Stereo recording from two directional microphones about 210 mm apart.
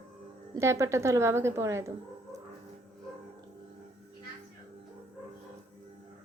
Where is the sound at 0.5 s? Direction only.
15° right (ahead or behind).